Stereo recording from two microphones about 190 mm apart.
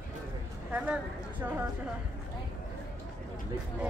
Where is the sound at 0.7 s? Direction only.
10° right (ahead or behind).